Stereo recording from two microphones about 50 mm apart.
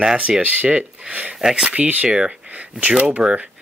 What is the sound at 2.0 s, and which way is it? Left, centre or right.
Speech, centre.